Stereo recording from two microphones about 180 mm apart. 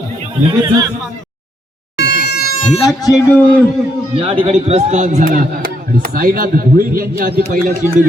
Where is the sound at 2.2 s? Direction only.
60° left (ahead or behind).